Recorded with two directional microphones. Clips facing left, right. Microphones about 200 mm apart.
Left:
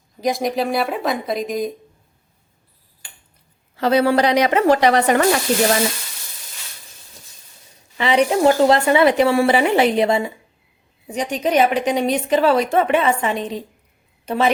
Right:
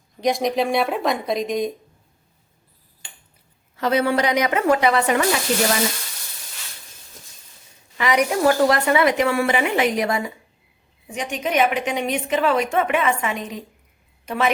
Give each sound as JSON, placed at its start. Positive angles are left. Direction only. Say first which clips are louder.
{"t": 0.2, "sound": "speech", "louder": "even", "side_deg": 0}
{"t": 3.8, "sound": "a woman's voice", "louder": "left 4 dB", "side_deg": 35}
{"t": 7.9, "sound": "a woman's voice", "louder": "left 3 dB", "side_deg": 30}